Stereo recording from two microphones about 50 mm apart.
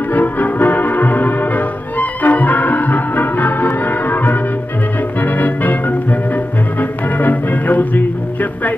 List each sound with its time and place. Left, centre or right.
0.1 s music: left